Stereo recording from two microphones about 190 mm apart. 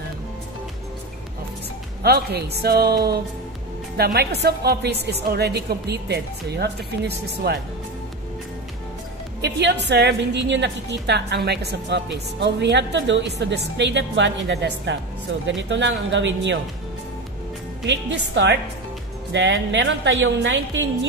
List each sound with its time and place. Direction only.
2.0 s a woman's voice: 60° right (ahead or behind)
9.4 s a woman's voice: 65° right (ahead or behind)
17.8 s a woman's voice: 70° right (ahead or behind)